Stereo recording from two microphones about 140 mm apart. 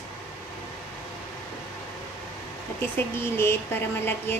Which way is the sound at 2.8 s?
15° left (ahead or behind).